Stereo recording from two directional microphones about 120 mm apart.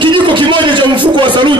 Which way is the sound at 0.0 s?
40° right (ahead or behind).